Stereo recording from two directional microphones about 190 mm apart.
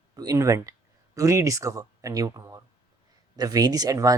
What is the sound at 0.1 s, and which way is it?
Speech, 20° right (ahead or behind).